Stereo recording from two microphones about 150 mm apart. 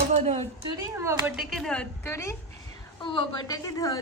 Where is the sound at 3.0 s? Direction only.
30° left (ahead or behind).